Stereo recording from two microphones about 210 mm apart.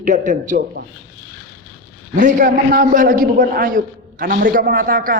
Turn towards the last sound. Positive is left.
turn(degrees=-40)  # may be behind; listen again after turning